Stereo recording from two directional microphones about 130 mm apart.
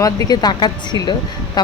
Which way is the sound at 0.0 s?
30° left (ahead or behind).